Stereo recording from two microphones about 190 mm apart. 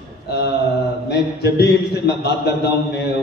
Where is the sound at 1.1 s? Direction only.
60° left (ahead or behind).